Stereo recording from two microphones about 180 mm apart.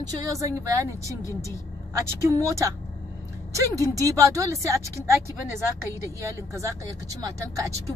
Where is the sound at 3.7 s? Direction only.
20° right (ahead or behind).